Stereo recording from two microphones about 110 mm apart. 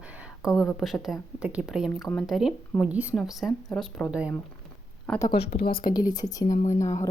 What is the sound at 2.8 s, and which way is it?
Speech, 15° right (ahead or behind).